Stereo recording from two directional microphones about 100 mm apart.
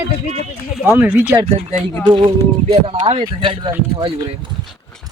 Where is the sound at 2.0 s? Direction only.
55° right (ahead or behind).